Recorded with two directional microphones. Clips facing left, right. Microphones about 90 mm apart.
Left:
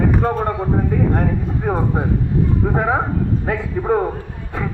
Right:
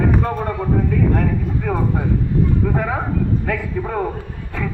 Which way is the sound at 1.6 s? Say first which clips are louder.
Left 2 dB; 30° left (ahead or behind).